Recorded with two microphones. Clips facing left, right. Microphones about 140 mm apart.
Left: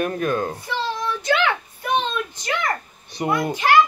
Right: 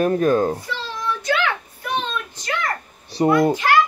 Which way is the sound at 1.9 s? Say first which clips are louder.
Left 3 dB; 20° left (ahead or behind).